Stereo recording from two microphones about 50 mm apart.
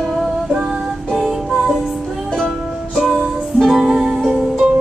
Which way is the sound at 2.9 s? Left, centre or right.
Centre.